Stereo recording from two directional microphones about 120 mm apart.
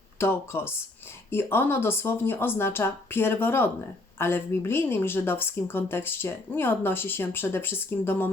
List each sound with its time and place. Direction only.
0.2 s a woman's voice: 20° left (ahead or behind)